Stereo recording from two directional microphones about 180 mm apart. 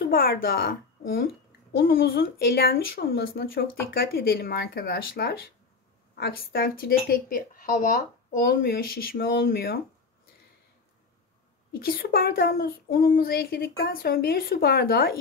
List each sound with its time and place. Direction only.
0.0 s speech: 55° left (ahead or behind)
11.8 s speech: 55° left (ahead or behind)